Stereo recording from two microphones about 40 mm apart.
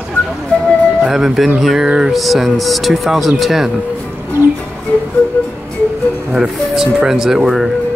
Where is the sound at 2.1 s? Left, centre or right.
Centre.